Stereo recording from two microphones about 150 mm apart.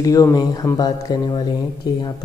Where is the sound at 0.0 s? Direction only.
25° left (ahead or behind).